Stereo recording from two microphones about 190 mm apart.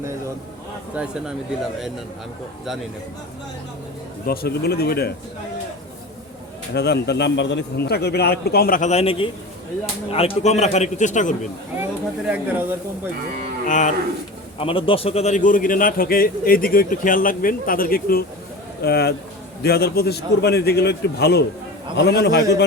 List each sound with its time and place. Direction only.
1.0 s speech: 5° right (ahead or behind)
4.3 s a man's voice: 55° left (ahead or behind)
6.7 s a man's voice: 60° left (ahead or behind); by 11.3 s 40° left (ahead or behind)
11.8 s speech: 10° right (ahead or behind)
13.7 s a man's voice: 40° left (ahead or behind)
14.6 s a man's voice: 30° left (ahead or behind); by 22.6 s 65° left (ahead or behind)